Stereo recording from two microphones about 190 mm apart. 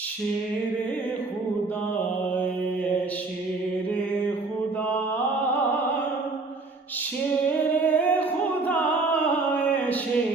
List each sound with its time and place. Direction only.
7.9 s singing: 10° left (ahead or behind)